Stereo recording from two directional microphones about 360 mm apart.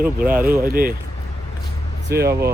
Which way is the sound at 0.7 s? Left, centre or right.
Right.